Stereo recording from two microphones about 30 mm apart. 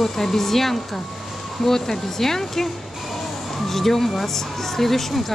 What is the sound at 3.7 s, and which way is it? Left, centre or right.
Speech, centre.